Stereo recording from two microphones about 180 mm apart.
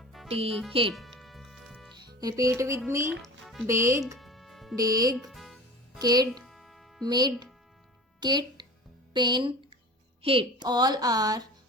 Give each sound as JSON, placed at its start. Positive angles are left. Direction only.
{"t": 0.0, "sound": "music", "side_deg": 0}
{"t": 0.3, "sound": "speech", "side_deg": -35}
{"t": 0.9, "sound": "music", "side_deg": 0}
{"t": 2.0, "sound": "speech", "side_deg": -20}
{"t": 3.2, "sound": "music", "side_deg": 0}
{"t": 3.7, "sound": "speech", "side_deg": -15}
{"t": 4.2, "sound": "music", "side_deg": 0}
{"t": 4.8, "sound": "a woman's voice", "side_deg": -20}
{"t": 5.1, "sound": "music", "side_deg": 0}
{"t": 6.0, "sound": "a woman's voice", "side_deg": -20}
{"t": 6.3, "sound": "music", "side_deg": 0}
{"t": 7.0, "sound": "a woman's voice", "side_deg": -25}